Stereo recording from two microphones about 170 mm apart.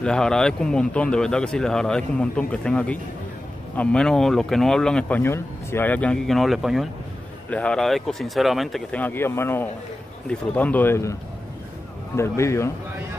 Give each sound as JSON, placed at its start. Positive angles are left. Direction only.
{"t": 0.0, "sound": "speech", "side_deg": 5}
{"t": 12.2, "sound": "speech", "side_deg": 15}